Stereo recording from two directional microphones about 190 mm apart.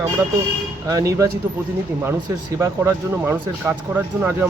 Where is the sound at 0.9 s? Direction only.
15° right (ahead or behind).